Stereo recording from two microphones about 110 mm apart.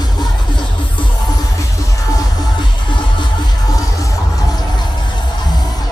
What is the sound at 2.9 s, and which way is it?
Music, 45° left (ahead or behind).